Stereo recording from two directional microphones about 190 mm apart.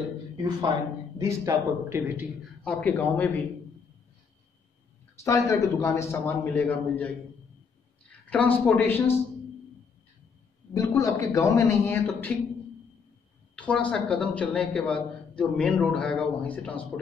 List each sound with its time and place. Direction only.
0.7 s a man's voice: 25° right (ahead or behind)
2.6 s a man's voice: 10° left (ahead or behind)
5.2 s a man's voice: 15° left (ahead or behind)
10.7 s a man's voice: 15° left (ahead or behind)
13.6 s a man's voice: 5° left (ahead or behind)